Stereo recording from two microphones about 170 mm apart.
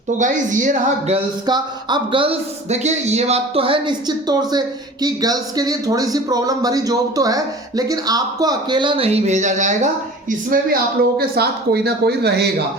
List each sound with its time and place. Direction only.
0.2 s speech: 50° right (ahead or behind)
1.5 s a man's voice: 25° right (ahead or behind); by 10.8 s 55° right (ahead or behind)
11.2 s speech: 70° right (ahead or behind)